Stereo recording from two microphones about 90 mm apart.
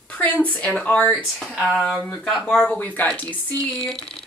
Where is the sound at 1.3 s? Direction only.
5° left (ahead or behind).